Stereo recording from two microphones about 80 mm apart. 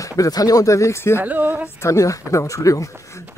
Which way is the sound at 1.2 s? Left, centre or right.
Right.